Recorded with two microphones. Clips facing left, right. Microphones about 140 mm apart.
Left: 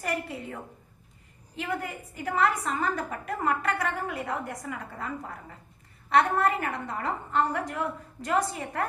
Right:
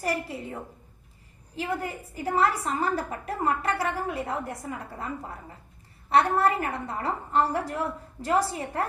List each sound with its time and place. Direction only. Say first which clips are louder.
0.0 s a woman's voice: right 2 dB; 30° right (ahead or behind)